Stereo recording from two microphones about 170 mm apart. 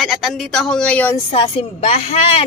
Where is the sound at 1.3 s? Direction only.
35° left (ahead or behind).